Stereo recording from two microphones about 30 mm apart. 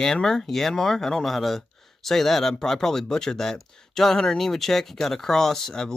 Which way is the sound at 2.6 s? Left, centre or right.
Centre.